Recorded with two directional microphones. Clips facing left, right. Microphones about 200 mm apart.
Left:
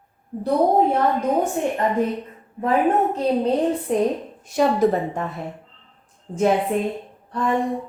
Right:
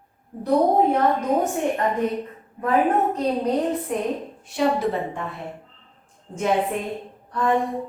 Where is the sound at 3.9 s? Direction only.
35° left (ahead or behind).